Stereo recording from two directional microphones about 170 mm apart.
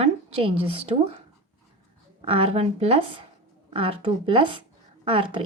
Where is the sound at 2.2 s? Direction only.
35° right (ahead or behind).